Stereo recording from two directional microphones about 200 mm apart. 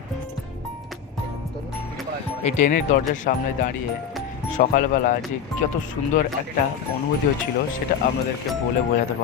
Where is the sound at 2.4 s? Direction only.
35° left (ahead or behind).